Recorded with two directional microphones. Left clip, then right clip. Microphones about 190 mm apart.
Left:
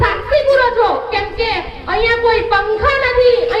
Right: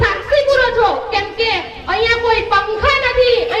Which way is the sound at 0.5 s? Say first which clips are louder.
Left 1 dB; 40° right (ahead or behind).